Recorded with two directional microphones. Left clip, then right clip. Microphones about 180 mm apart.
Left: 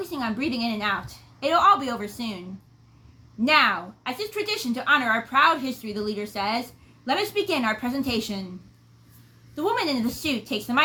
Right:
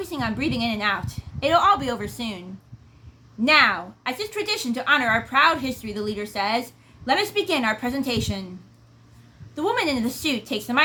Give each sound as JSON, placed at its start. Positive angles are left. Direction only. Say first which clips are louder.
{"t": 0.0, "sound": "a woman's voice", "louder": "right 2 dB", "side_deg": -20}
{"t": 3.4, "sound": "a woman's voice", "louder": "right 2 dB", "side_deg": -20}
{"t": 9.6, "sound": "a woman's voice", "louder": "right 2 dB", "side_deg": -20}